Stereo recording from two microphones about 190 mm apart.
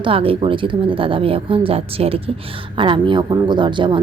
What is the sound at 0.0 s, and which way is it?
A woman's voice, 30° right (ahead or behind).